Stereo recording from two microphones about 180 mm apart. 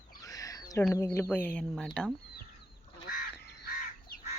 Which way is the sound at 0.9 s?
15° left (ahead or behind).